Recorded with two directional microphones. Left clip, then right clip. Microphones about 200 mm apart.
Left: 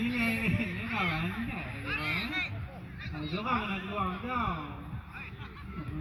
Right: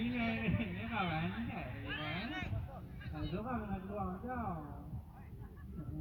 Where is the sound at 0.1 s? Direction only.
35° left (ahead or behind).